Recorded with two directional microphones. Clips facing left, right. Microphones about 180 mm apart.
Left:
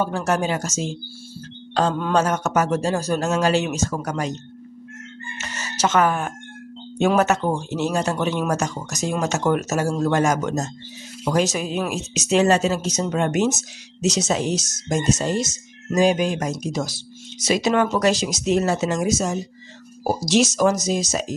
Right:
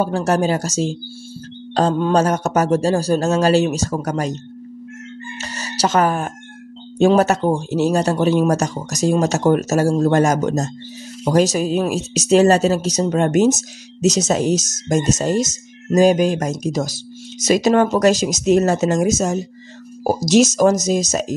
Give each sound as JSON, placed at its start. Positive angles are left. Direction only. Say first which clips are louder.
{"t": 0.0, "sound": "speech", "louder": "right 4 dB", "side_deg": -35}
{"t": 5.4, "sound": "a sound", "louder": "right 2 dB", "side_deg": -35}
{"t": 7.0, "sound": "speech", "louder": "right 5 dB", "side_deg": -35}